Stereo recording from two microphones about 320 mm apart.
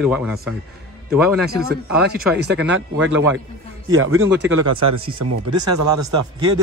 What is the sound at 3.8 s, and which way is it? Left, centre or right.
Speech, right.